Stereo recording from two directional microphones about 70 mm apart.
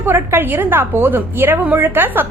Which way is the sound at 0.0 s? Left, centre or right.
Right.